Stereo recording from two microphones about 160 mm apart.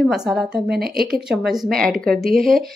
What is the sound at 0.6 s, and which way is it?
Speech, 75° right (ahead or behind).